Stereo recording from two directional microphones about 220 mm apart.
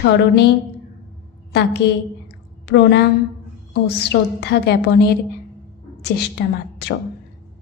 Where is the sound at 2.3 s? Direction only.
50° left (ahead or behind).